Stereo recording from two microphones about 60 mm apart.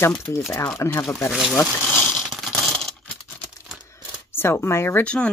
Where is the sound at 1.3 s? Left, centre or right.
Centre.